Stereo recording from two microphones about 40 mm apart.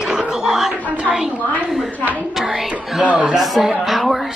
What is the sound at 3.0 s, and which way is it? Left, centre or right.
Speech, right.